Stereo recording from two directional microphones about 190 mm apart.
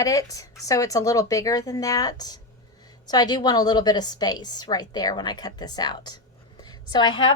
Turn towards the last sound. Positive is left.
turn(degrees=25)  # may be behind; listen again after turning